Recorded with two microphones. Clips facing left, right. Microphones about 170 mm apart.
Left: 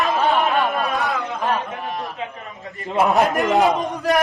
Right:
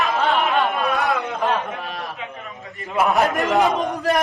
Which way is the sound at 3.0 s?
Centre (ahead or behind).